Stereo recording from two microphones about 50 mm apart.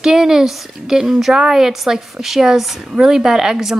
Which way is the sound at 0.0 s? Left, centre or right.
Centre.